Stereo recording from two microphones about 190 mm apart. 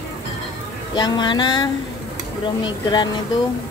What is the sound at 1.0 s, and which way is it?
Speech, 25° left (ahead or behind).